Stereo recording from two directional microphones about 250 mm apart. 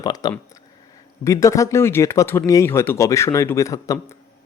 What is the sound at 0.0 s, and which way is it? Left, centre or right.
Speech, centre.